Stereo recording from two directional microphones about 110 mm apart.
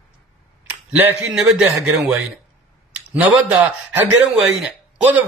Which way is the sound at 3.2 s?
15° right (ahead or behind).